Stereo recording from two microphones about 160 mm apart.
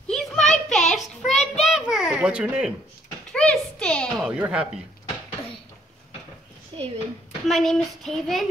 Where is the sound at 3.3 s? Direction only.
5° left (ahead or behind).